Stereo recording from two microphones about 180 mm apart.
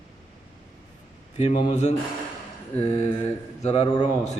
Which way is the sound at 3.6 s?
35° left (ahead or behind).